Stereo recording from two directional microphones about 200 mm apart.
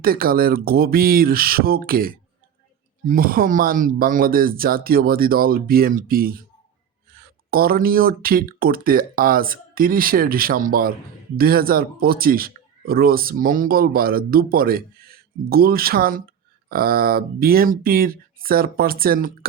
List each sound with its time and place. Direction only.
0.0 s speech: 45° right (ahead or behind)